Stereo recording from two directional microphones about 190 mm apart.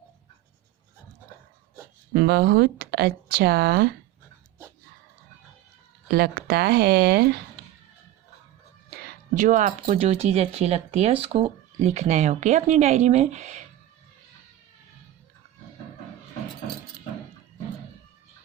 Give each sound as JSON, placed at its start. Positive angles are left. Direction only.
{"t": 2.1, "sound": "speech", "side_deg": -60}
{"t": 6.1, "sound": "speech", "side_deg": -55}
{"t": 9.3, "sound": "speech", "side_deg": -40}